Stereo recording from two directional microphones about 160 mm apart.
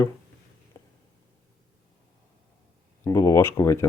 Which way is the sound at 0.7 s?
20° left (ahead or behind).